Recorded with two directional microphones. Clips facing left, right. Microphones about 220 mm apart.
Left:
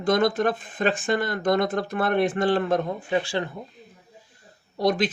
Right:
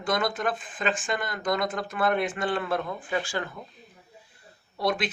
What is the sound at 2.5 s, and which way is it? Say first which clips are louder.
Speech: left 5 dB; 40° left (ahead or behind).